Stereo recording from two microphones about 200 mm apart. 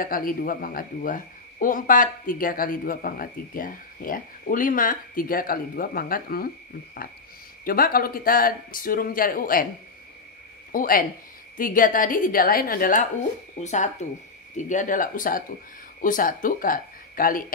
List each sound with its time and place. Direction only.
0.0 s speech: 45° left (ahead or behind)
7.6 s speech: 45° left (ahead or behind)
10.7 s speech: 45° left (ahead or behind)